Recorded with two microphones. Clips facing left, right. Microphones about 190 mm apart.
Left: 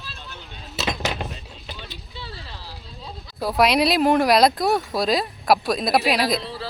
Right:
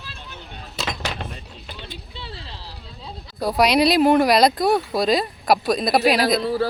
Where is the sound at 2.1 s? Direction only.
25° right (ahead or behind).